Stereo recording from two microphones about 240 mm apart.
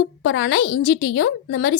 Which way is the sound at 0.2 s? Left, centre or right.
Left.